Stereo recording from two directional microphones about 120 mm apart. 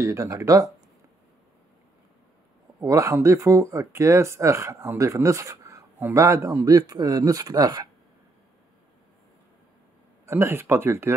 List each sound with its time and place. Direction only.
0.0 s speech: 25° right (ahead or behind)
2.8 s speech: 25° right (ahead or behind)
10.2 s speech: 20° right (ahead or behind)